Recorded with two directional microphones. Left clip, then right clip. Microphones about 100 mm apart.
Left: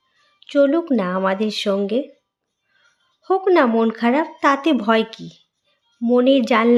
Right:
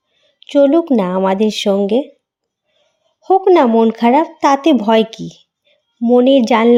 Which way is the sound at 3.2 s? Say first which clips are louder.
Right 7 dB; 35° right (ahead or behind).